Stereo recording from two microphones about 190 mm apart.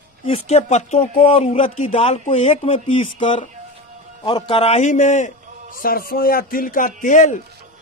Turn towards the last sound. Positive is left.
turn(degrees=40)  # may be behind; listen again after turning